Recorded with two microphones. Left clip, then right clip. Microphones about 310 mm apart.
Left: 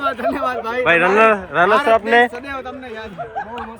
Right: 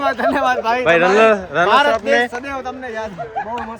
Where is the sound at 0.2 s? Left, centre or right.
Centre.